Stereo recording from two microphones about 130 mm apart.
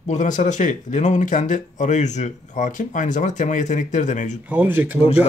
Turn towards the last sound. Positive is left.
turn(degrees=-15)  # may be behind; listen again after turning